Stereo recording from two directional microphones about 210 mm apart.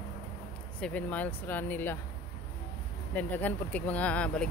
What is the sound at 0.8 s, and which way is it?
Speech, 5° left (ahead or behind).